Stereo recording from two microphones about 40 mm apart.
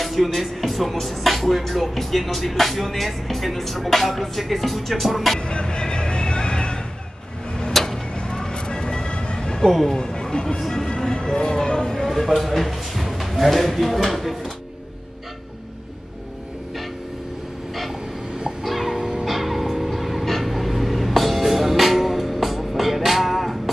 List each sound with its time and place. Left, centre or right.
0.0 s speech: centre
5.5 s vehicle: left
7.7 s tick-tock: centre
8.2 s vehicle: centre
9.7 s speech: centre
9.9 s speech: centre
12.2 s speech: centre
18.6 s music: centre
18.9 s music: centre
19.2 s music: centre